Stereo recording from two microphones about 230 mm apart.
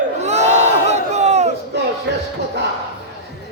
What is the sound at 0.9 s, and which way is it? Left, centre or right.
Battle cry, right.